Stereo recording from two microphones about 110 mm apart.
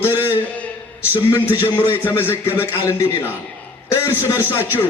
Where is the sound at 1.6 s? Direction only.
15° right (ahead or behind).